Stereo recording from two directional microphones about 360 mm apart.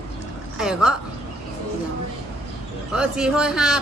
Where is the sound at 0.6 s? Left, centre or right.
Centre.